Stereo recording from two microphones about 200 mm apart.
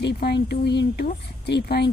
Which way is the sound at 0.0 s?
55° left (ahead or behind).